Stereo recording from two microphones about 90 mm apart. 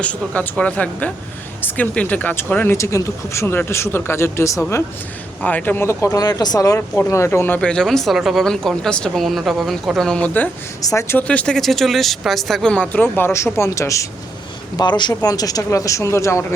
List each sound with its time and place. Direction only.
0.3 s speech: 15° left (ahead or behind)
2.7 s speech: 35° left (ahead or behind)
5.4 s speech: 15° left (ahead or behind); by 6.7 s 45° left (ahead or behind)
7.1 s speech: 30° left (ahead or behind)
7.6 s speech: 10° left (ahead or behind)
10.8 s speech: 35° left (ahead or behind)
11.2 s speech: 15° left (ahead or behind); by 14.1 s 35° left (ahead or behind)
14.8 s speech: 55° left (ahead or behind)
15.1 s speech: 45° left (ahead or behind)